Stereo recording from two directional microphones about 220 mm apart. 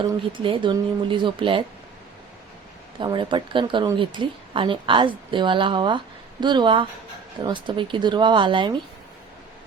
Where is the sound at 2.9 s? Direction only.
20° right (ahead or behind).